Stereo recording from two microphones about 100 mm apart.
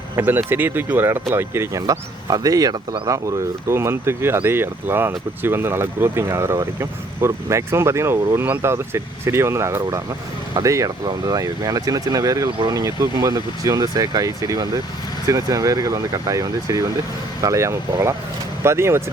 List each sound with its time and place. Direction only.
0.2 s speech: 20° right (ahead or behind)
2.2 s speech: 40° right (ahead or behind)